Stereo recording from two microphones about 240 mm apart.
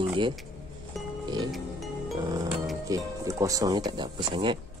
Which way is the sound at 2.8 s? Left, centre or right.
Centre.